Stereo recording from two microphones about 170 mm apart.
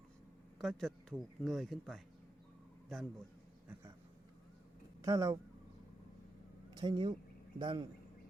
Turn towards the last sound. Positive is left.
turn(degrees=-30)  # may be behind; listen again after turning